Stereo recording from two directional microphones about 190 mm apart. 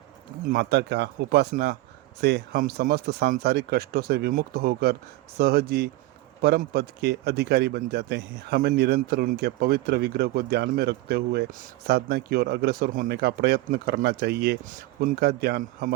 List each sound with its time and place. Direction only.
0.5 s a man's voice: 60° right (ahead or behind)
14.6 s speech: 45° right (ahead or behind)